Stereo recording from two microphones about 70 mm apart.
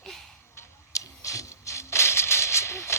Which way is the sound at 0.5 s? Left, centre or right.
Left.